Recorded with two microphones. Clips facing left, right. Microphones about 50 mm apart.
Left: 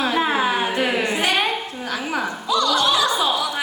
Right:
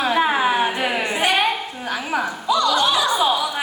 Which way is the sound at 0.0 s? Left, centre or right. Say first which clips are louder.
Right 2 dB; centre.